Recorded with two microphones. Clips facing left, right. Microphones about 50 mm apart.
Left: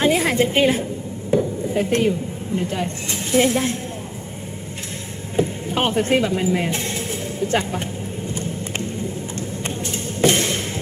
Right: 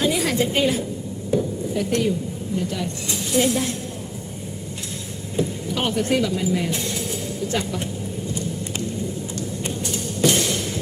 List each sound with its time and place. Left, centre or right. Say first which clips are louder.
0.0 s a woman's voice: left 3 dB; left
5.4 s speech: left 3 dB; left
8.3 s vehicle: left 2 dB; left